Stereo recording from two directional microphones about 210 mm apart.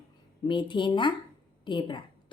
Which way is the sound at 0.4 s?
25° left (ahead or behind).